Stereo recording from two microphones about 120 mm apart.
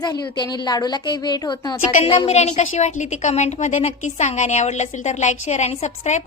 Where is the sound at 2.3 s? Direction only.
70° left (ahead or behind).